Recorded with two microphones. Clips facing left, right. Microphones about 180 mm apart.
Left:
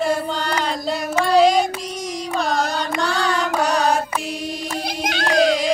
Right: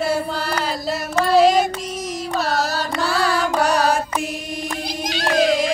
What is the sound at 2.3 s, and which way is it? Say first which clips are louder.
Carnatic music: even; 5° right (ahead or behind).